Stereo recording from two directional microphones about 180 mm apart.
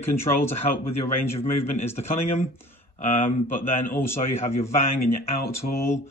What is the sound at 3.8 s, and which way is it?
Speech, 10° left (ahead or behind).